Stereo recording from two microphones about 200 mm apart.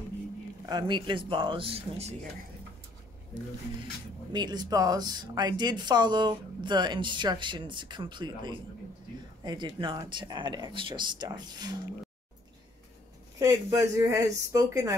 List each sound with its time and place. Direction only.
0.7 s speech: 20° right (ahead or behind)
4.3 s speech: 20° right (ahead or behind)
13.4 s speech: 15° right (ahead or behind)